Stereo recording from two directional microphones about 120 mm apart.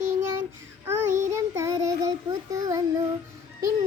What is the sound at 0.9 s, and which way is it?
Child singing, 20° right (ahead or behind).